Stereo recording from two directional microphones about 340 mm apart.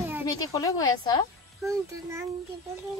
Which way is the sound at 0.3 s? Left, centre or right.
Centre.